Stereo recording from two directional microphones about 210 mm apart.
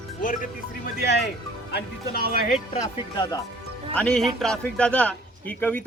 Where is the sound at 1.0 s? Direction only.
50° left (ahead or behind).